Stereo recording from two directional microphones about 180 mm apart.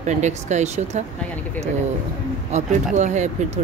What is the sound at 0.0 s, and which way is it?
Speech, 40° right (ahead or behind).